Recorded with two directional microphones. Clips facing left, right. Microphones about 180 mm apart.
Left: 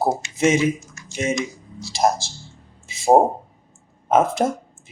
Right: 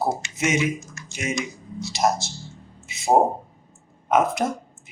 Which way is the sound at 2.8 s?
30° left (ahead or behind).